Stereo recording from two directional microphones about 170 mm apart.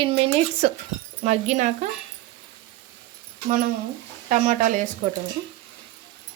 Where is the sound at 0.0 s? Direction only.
35° right (ahead or behind).